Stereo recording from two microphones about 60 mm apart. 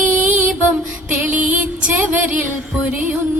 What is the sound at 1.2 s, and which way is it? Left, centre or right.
Music, right.